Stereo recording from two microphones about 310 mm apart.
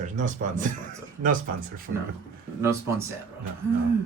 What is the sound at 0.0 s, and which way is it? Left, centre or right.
Speech, right.